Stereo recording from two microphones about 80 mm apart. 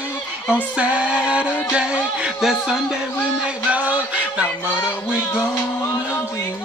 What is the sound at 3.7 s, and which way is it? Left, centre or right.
Music, centre.